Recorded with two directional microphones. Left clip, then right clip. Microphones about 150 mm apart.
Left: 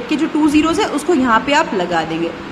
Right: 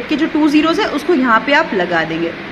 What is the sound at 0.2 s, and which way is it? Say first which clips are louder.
A woman's voice: right 1 dB; centre (ahead or behind).